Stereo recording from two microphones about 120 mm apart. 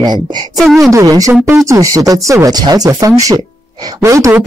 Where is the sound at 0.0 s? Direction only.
35° right (ahead or behind).